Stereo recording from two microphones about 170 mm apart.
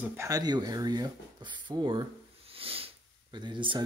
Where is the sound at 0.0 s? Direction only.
20° right (ahead or behind).